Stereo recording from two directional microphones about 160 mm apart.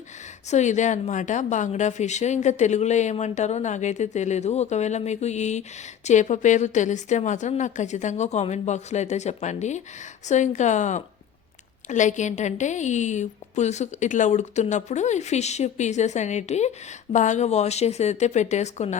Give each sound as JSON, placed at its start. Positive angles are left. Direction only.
{"t": 0.5, "sound": "a woman's voice", "side_deg": 50}